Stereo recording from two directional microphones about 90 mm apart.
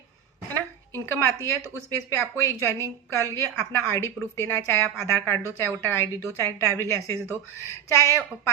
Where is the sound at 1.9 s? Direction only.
30° left (ahead or behind).